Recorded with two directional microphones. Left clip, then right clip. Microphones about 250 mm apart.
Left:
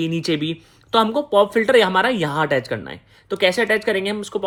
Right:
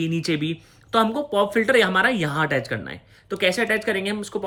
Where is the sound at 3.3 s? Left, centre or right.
Left.